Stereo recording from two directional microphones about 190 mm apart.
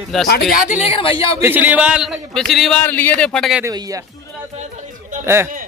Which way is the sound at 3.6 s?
20° right (ahead or behind).